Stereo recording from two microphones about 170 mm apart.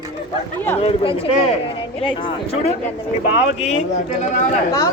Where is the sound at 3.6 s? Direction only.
45° left (ahead or behind).